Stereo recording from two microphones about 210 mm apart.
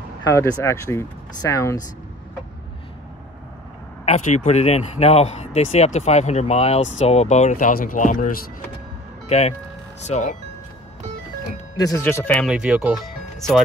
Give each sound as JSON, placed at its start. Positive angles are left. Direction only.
{"t": 0.2, "sound": "speech", "side_deg": 15}
{"t": 4.0, "sound": "speech", "side_deg": 35}
{"t": 11.7, "sound": "speech", "side_deg": 15}